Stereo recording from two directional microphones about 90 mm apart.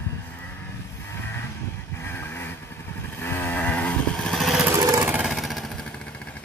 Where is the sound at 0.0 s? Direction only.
20° left (ahead or behind).